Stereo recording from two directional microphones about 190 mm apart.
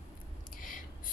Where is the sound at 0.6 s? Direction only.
45° left (ahead or behind).